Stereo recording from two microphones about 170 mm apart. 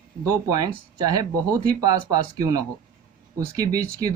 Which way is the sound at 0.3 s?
20° right (ahead or behind).